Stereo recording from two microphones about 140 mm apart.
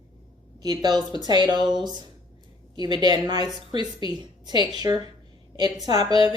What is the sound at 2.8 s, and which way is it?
A woman's voice, 30° right (ahead or behind).